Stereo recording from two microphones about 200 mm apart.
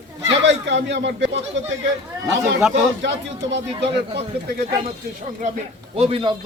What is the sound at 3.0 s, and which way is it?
Speech, 65° right (ahead or behind).